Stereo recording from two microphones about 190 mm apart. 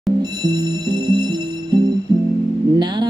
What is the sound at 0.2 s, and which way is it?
Music, 25° right (ahead or behind).